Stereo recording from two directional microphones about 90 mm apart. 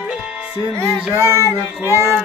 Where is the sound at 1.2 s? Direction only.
30° right (ahead or behind).